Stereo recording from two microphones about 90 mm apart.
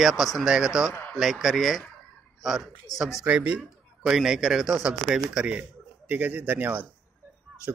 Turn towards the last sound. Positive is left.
turn(degrees=-20)  # may be behind; listen again after turning